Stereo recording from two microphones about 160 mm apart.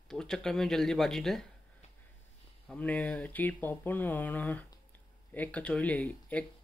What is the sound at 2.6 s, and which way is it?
Speech, 10° left (ahead or behind).